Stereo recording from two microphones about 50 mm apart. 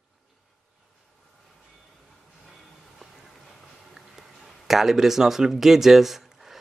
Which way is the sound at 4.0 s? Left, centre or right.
Centre.